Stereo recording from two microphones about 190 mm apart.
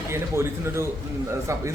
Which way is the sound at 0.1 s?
15° right (ahead or behind).